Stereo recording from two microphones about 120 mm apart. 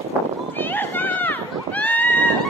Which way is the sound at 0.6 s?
15° left (ahead or behind).